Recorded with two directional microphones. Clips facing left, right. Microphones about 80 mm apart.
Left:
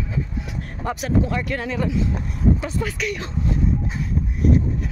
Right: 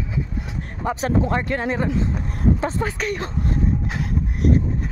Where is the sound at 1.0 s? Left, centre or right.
Right.